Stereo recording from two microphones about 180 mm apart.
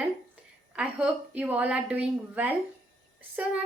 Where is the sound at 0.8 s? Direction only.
5° right (ahead or behind).